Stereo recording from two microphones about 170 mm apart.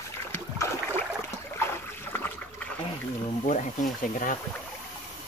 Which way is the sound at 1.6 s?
15° left (ahead or behind).